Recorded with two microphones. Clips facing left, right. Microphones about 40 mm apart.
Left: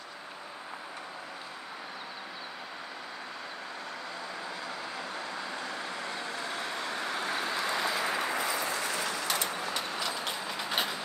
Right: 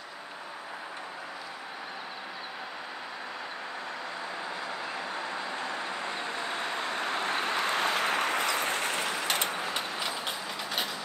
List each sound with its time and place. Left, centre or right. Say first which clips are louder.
4.9 s vehicle: right 3 dB; right
9.9 s vehicle: right 1 dB; right
10.4 s train: even; centre
10.7 s train: left 2 dB; centre